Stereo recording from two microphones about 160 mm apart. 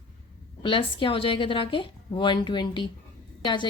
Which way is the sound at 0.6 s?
30° left (ahead or behind).